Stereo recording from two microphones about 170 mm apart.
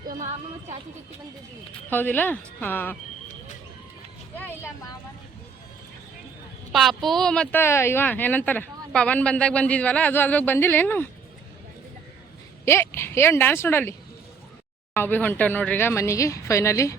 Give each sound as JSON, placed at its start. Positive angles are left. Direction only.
{"t": 0.1, "sound": "speech", "side_deg": -50}
{"t": 1.9, "sound": "speech", "side_deg": 10}
{"t": 4.4, "sound": "speech", "side_deg": 10}
{"t": 6.7, "sound": "speech", "side_deg": 0}
{"t": 12.6, "sound": "speech", "side_deg": 15}
{"t": 14.9, "sound": "speech", "side_deg": 10}